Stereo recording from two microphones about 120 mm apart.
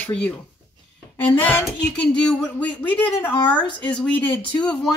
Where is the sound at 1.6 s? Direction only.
5° left (ahead or behind).